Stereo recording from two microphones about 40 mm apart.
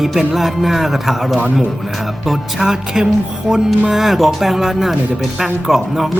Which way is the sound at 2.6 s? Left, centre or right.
Centre.